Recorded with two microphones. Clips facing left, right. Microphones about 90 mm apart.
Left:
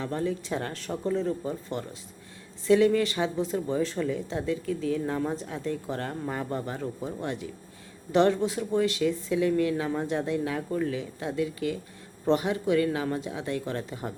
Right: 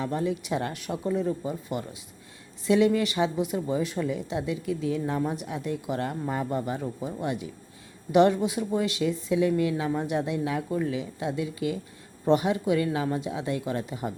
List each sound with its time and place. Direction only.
0.0 s speech: 20° right (ahead or behind)